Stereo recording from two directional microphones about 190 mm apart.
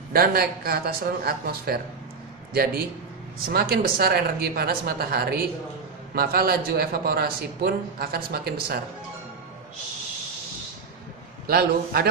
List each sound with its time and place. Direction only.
0.1 s a man's voice: 55° right (ahead or behind)
11.4 s a man's voice: 55° right (ahead or behind)